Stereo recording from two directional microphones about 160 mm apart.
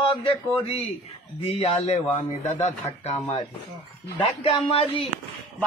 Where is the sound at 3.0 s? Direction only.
35° left (ahead or behind).